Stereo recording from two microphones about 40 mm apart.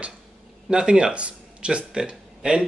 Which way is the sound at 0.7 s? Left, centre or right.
Right.